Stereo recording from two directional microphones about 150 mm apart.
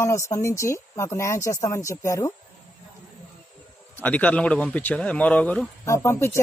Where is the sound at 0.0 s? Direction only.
20° left (ahead or behind).